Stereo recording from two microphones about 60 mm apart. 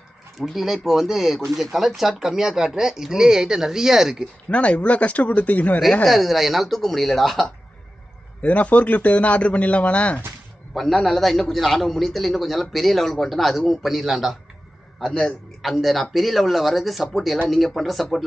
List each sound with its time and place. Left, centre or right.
0.4 s a man's voice: centre
4.5 s a man's voice: left
6.0 s a man's voice: centre
8.4 s a man's voice: left
10.7 s a man's voice: centre
15.0 s a man's voice: centre